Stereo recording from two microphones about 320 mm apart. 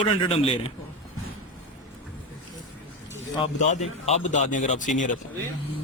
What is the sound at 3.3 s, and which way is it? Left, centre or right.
Speech, centre.